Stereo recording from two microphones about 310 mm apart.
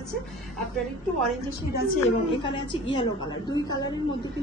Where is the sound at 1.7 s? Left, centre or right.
Centre.